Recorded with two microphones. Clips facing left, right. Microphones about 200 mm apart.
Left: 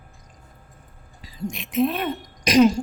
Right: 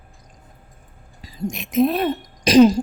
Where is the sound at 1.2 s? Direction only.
45° right (ahead or behind).